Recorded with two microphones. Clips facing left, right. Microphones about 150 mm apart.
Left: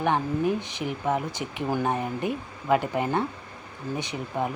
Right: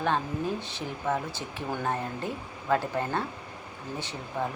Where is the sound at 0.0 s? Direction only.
15° left (ahead or behind).